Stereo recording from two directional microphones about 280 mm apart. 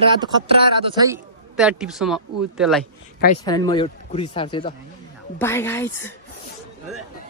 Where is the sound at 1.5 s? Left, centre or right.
Centre.